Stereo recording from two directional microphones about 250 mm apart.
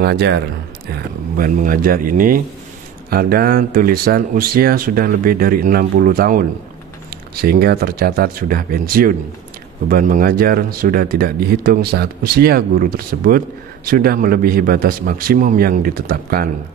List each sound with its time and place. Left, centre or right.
0.0 s speech: right